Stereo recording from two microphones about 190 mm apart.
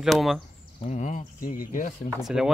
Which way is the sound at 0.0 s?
Centre (ahead or behind).